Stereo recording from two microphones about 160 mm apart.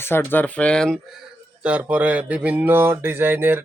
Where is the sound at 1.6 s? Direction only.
10° right (ahead or behind).